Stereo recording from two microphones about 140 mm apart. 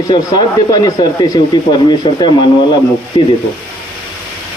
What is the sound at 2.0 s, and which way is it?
A man's voice, 35° left (ahead or behind).